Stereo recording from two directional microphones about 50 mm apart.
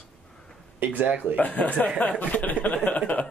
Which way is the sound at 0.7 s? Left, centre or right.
Right.